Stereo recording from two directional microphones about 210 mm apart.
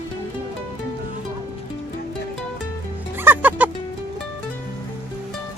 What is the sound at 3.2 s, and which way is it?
Music, 10° right (ahead or behind).